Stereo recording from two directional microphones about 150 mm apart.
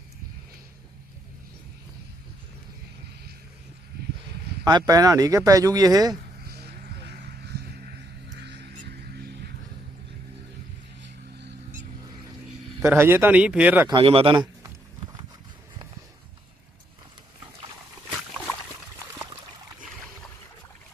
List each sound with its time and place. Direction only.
4.6 s speech: 25° right (ahead or behind)
6.4 s vehicle: 90° right
12.8 s speech: 15° right (ahead or behind)
13.9 s speech: 40° right (ahead or behind)